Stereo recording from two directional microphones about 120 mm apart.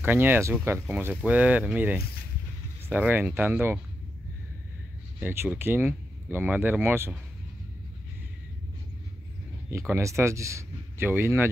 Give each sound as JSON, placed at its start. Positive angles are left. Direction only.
{"t": 0.0, "sound": "speech", "side_deg": -15}
{"t": 5.2, "sound": "speech", "side_deg": -20}
{"t": 9.7, "sound": "speech", "side_deg": -20}